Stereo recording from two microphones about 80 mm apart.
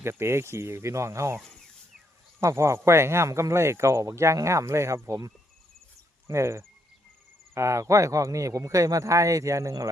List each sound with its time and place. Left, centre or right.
0.0 s speech: right
2.4 s speech: right
6.2 s speech: right